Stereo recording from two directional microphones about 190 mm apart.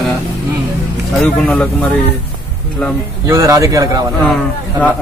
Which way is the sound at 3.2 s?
15° right (ahead or behind).